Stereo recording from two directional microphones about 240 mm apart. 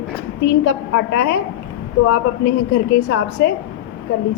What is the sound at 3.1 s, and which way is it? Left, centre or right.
Speech, left.